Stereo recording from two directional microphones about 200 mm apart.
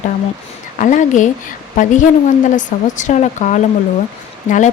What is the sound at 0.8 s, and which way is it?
Speech, 40° left (ahead or behind).